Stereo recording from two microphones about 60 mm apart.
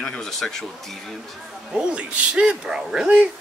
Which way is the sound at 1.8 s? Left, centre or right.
Centre.